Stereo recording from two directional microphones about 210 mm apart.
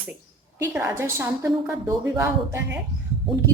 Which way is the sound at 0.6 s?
15° right (ahead or behind).